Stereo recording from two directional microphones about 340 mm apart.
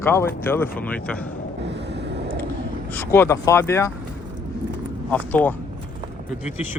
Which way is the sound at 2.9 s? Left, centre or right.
Centre.